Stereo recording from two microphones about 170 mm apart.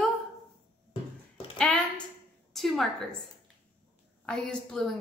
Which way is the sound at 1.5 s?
5° left (ahead or behind).